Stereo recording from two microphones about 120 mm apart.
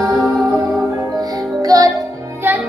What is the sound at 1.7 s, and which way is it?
Music, 30° right (ahead or behind).